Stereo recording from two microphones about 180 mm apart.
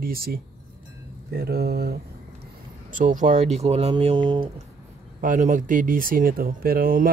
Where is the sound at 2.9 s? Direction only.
45° right (ahead or behind); by 4.4 s 30° right (ahead or behind).